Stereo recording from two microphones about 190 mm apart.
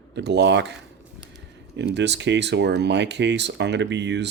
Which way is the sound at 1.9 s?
65° right (ahead or behind).